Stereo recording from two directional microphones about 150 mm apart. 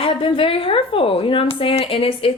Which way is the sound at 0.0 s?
35° left (ahead or behind).